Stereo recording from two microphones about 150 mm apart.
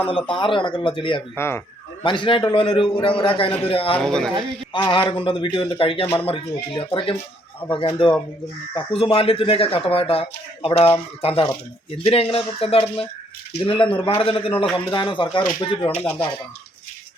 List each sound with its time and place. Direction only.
0.1 s speech: 35° left (ahead or behind)
1.4 s speech: 15° left (ahead or behind)
2.0 s speech: 35° left (ahead or behind)
3.9 s speech: 5° left (ahead or behind)
4.7 s speech: 35° left (ahead or behind)